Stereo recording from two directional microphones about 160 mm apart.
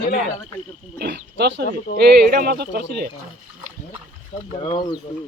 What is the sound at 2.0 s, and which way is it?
Speech, 75° right (ahead or behind).